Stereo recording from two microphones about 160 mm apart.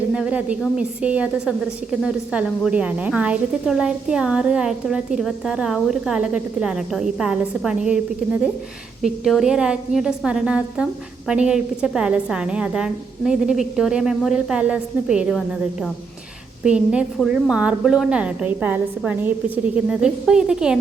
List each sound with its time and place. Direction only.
0.1 s a woman's voice: 5° right (ahead or behind)